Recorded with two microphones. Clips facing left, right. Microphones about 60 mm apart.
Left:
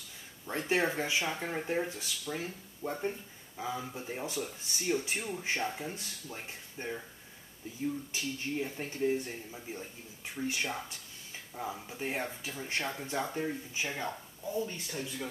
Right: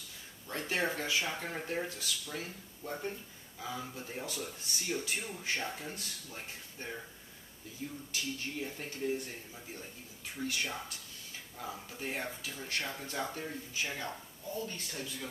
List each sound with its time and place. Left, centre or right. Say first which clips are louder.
0.5 s speech: left 4 dB; left
8.1 s speech: left 3 dB; left